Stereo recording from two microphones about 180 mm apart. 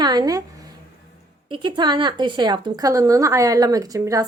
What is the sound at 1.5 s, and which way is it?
A woman's voice, 25° right (ahead or behind).